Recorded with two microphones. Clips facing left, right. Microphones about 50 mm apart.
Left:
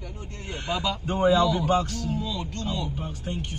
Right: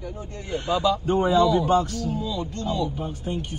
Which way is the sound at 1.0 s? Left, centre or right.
Left.